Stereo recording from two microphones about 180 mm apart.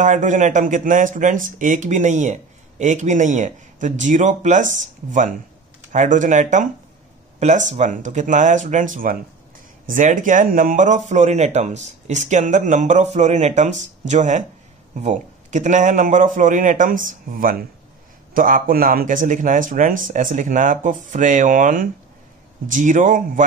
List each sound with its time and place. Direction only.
0.0 s speech: 45° right (ahead or behind)